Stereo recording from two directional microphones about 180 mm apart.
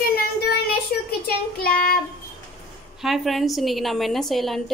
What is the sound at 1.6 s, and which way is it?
Child singing, 55° left (ahead or behind).